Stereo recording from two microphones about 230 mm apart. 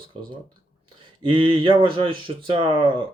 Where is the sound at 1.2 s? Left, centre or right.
Right.